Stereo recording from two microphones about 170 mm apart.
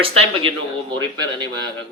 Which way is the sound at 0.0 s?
35° right (ahead or behind).